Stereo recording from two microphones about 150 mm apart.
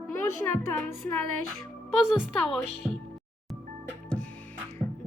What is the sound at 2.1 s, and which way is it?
Speech, centre (ahead or behind).